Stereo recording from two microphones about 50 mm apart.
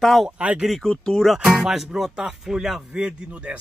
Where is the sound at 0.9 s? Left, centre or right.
Centre.